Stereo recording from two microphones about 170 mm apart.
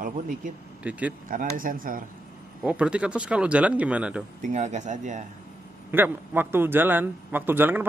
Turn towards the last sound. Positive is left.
turn(degrees=-10)  # may be behind; listen again after turning